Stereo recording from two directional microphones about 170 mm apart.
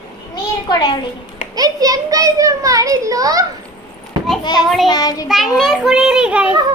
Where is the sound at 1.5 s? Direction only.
20° right (ahead or behind).